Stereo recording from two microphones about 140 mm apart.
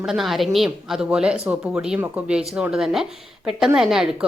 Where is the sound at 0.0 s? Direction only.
Centre (ahead or behind).